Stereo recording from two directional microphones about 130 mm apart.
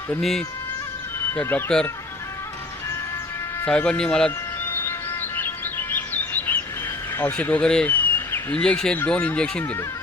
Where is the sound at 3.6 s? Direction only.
10° left (ahead or behind).